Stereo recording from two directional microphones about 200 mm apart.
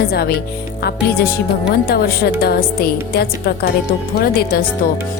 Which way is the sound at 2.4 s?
50° left (ahead or behind).